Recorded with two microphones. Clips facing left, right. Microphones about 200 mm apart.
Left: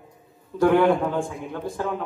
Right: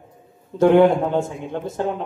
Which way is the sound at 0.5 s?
25° right (ahead or behind).